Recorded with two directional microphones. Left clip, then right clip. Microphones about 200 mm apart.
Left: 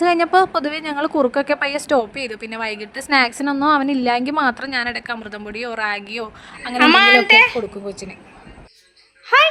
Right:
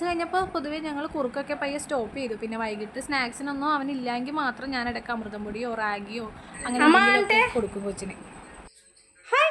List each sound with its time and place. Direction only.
0.0 s a woman's voice: 45° left (ahead or behind)
6.7 s a child's voice: 10° right (ahead or behind)
7.9 s speech: 20° left (ahead or behind)
9.3 s a child's voice: 5° left (ahead or behind)